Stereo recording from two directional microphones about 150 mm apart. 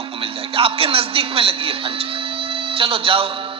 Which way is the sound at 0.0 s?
35° right (ahead or behind).